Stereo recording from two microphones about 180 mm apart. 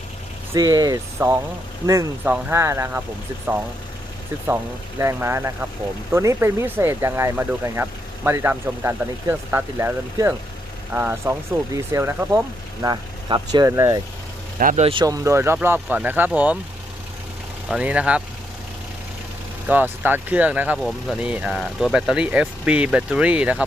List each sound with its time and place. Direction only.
0.5 s speech: 20° right (ahead or behind)
4.4 s speech: 15° right (ahead or behind)
14.6 s speech: 45° right (ahead or behind)
14.8 s speech: 25° right (ahead or behind)
17.7 s speech: 5° right (ahead or behind)
19.6 s speech: 10° right (ahead or behind)